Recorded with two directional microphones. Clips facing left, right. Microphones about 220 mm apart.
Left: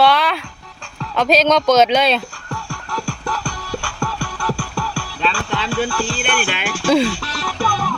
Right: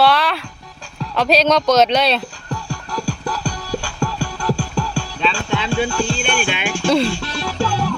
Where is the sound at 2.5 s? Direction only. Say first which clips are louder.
Right 1 dB; 20° right (ahead or behind).